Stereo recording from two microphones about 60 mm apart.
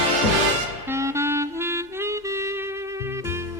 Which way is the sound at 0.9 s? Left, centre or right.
Right.